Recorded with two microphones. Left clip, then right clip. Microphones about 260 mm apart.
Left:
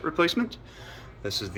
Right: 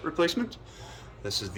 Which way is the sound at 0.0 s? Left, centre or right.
Centre.